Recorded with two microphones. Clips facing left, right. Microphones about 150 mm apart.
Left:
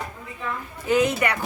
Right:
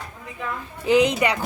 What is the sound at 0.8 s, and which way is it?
Speech, 20° right (ahead or behind).